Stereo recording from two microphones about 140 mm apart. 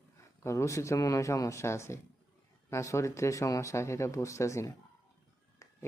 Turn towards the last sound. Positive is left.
turn(degrees=20)  # may be behind; listen again after turning